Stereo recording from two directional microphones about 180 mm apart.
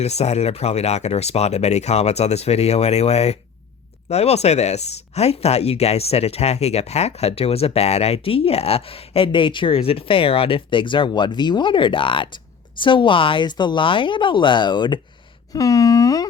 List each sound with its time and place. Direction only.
0.0 s speech: 35° left (ahead or behind); by 16.3 s 20° left (ahead or behind)